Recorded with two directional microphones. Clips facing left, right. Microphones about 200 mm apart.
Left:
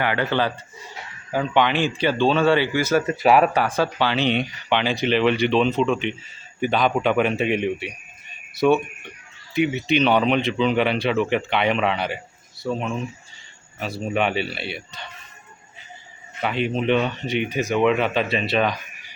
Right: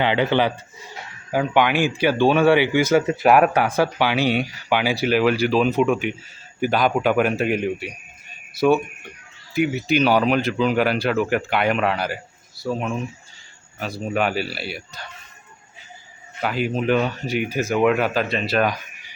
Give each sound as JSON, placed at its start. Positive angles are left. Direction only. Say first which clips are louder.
{"t": 0.0, "sound": "speech", "louder": "right 3 dB", "side_deg": -20}
{"t": 16.4, "sound": "speech", "louder": "even", "side_deg": -5}